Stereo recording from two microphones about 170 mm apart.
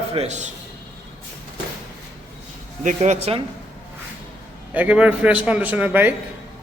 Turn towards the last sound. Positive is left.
turn(degrees=-10)  # may be behind; listen again after turning